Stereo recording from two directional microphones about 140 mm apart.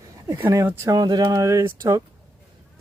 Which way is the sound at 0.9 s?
30° right (ahead or behind).